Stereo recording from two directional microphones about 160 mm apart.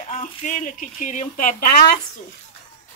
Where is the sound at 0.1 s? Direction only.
50° left (ahead or behind).